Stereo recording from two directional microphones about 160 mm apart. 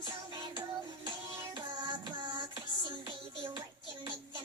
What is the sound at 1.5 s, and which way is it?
Music, 30° right (ahead or behind).